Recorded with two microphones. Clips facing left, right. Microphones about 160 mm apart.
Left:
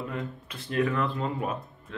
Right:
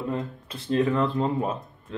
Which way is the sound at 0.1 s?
30° right (ahead or behind).